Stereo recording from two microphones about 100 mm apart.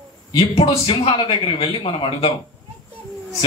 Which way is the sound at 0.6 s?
70° left (ahead or behind).